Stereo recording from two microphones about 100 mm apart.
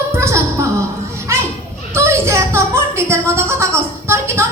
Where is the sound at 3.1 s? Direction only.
25° right (ahead or behind).